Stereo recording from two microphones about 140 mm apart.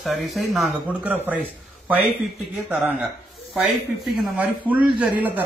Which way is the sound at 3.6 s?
Centre (ahead or behind).